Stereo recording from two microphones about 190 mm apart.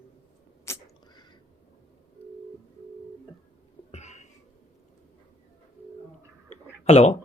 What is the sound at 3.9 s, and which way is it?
Cough, 35° left (ahead or behind).